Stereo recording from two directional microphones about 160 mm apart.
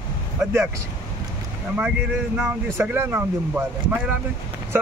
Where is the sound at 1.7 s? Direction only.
10° right (ahead or behind).